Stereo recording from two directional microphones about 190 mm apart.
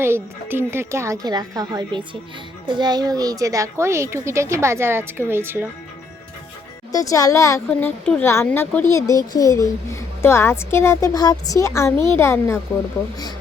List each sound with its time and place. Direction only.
0.0 s a child's voice: 10° right (ahead or behind)
6.9 s a woman's voice: 15° left (ahead or behind)